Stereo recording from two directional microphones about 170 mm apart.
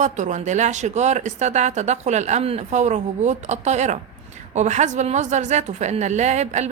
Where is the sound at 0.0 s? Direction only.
45° right (ahead or behind).